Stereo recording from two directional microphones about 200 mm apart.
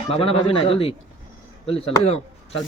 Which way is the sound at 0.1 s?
30° left (ahead or behind).